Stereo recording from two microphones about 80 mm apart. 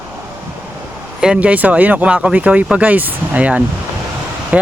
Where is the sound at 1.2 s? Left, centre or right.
Centre.